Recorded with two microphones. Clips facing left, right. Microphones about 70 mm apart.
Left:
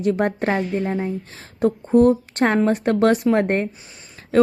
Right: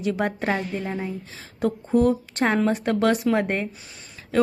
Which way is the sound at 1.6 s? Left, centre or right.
Left.